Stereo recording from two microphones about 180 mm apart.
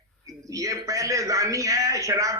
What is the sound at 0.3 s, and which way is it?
A man's voice, 20° right (ahead or behind).